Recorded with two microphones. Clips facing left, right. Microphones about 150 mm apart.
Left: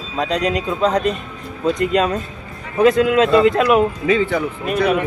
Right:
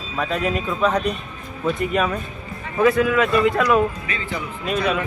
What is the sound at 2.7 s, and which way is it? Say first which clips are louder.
Speech: left 4 dB; 20° left (ahead or behind).